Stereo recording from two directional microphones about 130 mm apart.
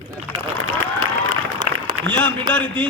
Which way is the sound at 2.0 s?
10° left (ahead or behind).